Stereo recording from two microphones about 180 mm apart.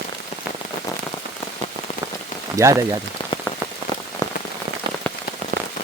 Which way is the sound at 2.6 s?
15° right (ahead or behind).